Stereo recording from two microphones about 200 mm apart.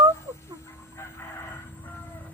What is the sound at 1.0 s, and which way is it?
Vehicle, 15° left (ahead or behind).